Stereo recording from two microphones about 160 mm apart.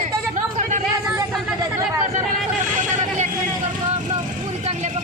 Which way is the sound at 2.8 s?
45° right (ahead or behind).